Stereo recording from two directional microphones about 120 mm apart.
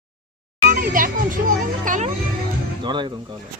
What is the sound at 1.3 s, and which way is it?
Music, 90° right.